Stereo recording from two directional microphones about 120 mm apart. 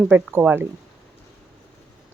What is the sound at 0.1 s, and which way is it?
Speech, 20° right (ahead or behind).